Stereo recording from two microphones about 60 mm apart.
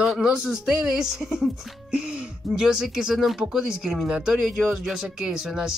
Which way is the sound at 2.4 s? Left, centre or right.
Centre.